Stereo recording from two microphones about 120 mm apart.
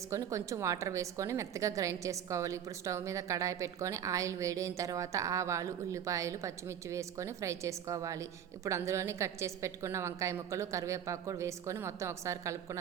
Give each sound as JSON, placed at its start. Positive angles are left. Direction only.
{"t": 0.1, "sound": "a woman's voice", "side_deg": -25}